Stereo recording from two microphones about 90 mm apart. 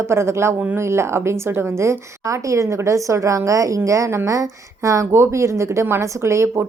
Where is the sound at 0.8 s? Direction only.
30° right (ahead or behind).